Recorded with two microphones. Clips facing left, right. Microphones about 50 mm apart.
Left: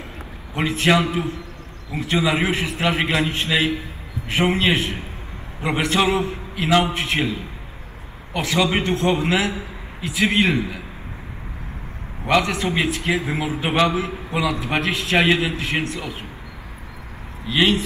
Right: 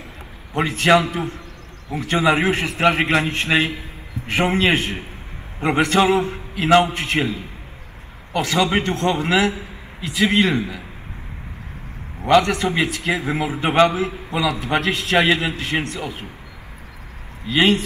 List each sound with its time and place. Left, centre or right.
0.6 s a man's voice: right
12.3 s a man's voice: right
17.5 s a man's voice: right